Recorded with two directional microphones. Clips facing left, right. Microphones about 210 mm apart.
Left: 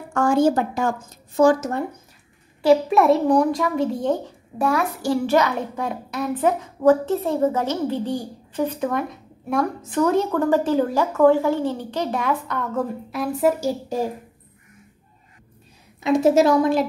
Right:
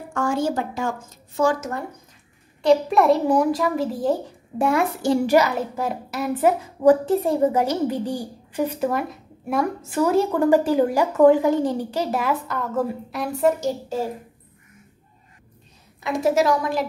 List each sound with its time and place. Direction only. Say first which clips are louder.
0.1 s a woman's voice: left 5 dB; 55° left (ahead or behind)
2.6 s a child's voice: left 1 dB; centre (ahead or behind)
4.6 s a child's voice: right 1 dB; 25° right (ahead or behind); by 14.0 s 10° left (ahead or behind)
16.0 s a woman's voice: left 4 dB; 25° left (ahead or behind)